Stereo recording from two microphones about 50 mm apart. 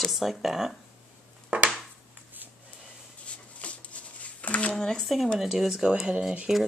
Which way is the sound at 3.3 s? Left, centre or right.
Left.